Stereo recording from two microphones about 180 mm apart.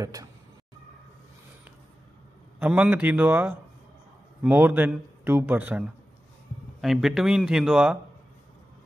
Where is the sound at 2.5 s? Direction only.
5° right (ahead or behind).